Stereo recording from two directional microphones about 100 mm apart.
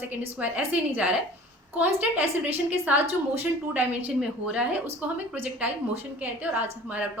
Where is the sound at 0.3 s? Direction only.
15° right (ahead or behind).